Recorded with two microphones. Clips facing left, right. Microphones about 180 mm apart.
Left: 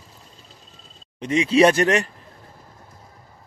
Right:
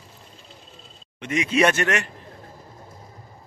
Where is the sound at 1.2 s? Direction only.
30° left (ahead or behind).